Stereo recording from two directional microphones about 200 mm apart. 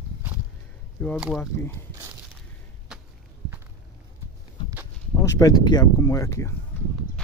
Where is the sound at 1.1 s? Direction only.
5° right (ahead or behind).